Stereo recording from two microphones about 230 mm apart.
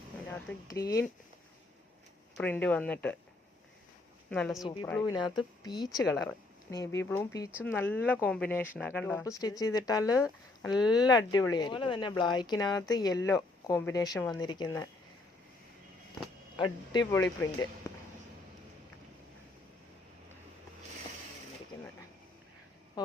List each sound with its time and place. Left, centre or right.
0.3 s speech: centre
2.4 s speech: centre
4.3 s speech: centre
5.6 s speech: centre
16.9 s speech: centre